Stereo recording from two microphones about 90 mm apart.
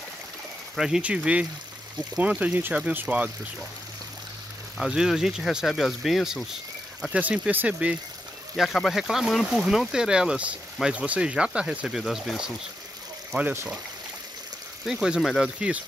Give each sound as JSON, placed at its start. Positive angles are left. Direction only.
{"t": 0.7, "sound": "speech", "side_deg": -5}
{"t": 4.7, "sound": "speech", "side_deg": -5}
{"t": 7.0, "sound": "speech", "side_deg": -15}
{"t": 8.5, "sound": "speech", "side_deg": 0}
{"t": 13.3, "sound": "speech", "side_deg": -30}
{"t": 14.9, "sound": "speech", "side_deg": -5}